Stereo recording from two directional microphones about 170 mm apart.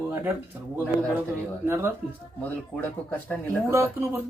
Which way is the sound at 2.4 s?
10° left (ahead or behind).